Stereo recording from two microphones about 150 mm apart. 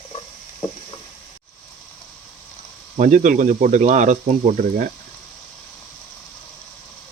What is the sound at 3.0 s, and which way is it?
Speech, 60° right (ahead or behind).